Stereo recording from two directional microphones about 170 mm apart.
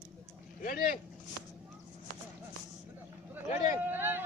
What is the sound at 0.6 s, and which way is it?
Vehicle, 55° left (ahead or behind).